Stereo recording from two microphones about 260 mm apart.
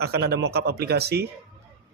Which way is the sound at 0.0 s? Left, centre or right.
Right.